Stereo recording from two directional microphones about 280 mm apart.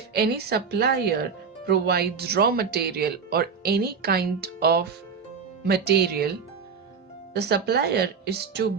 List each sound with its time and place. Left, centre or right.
0.1 s speech: right
7.3 s speech: right